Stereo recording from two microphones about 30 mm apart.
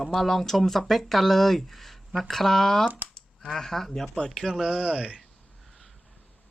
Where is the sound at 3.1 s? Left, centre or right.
Centre.